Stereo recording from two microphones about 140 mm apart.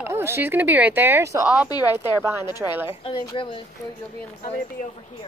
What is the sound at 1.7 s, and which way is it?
Speech, 25° left (ahead or behind).